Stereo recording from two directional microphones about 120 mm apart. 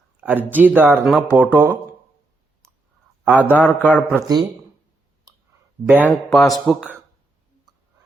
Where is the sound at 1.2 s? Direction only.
15° right (ahead or behind).